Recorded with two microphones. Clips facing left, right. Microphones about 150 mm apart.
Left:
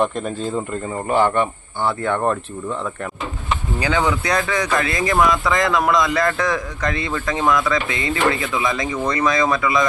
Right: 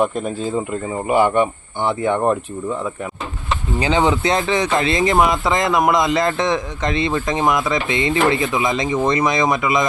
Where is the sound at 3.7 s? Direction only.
20° right (ahead or behind).